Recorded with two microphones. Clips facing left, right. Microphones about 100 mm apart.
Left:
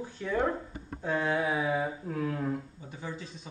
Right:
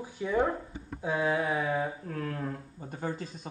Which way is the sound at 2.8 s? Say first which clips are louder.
Right 5 dB; 50° right (ahead or behind).